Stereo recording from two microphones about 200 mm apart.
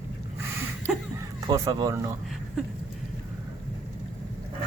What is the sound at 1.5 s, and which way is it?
Speech, 20° right (ahead or behind).